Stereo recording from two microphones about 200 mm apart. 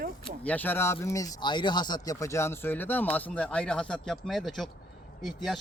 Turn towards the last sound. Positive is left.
turn(degrees=0)  # may be behind; listen again after turning